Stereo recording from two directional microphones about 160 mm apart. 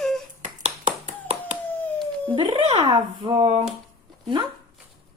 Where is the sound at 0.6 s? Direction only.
45° right (ahead or behind).